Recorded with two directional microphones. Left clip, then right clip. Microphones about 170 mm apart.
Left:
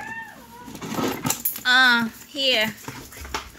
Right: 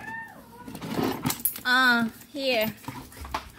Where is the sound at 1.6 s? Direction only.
25° right (ahead or behind).